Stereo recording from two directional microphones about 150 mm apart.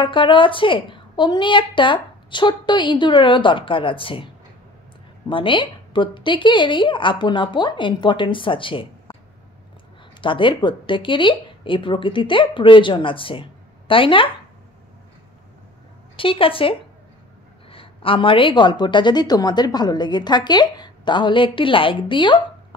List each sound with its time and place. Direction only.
0.0 s a woman's voice: 35° left (ahead or behind)
5.3 s a woman's voice: 35° left (ahead or behind)
10.2 s a woman's voice: 35° left (ahead or behind)
16.2 s a woman's voice: 35° left (ahead or behind)